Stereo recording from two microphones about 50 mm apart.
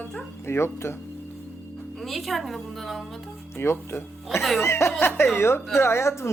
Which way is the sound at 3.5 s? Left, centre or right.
Left.